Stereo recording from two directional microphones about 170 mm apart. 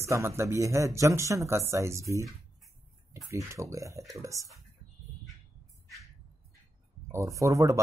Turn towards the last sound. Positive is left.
turn(degrees=-20)  # may be behind; listen again after turning